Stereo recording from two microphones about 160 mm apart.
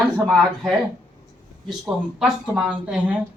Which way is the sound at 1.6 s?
Centre (ahead or behind).